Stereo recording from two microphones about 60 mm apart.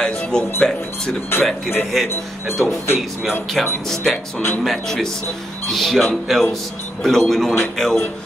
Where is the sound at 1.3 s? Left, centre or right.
Left.